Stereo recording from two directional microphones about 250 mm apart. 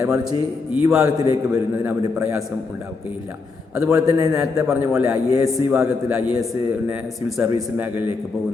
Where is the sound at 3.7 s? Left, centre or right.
Centre.